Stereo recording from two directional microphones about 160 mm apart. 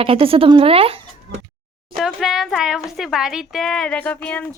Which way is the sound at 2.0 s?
Centre (ahead or behind).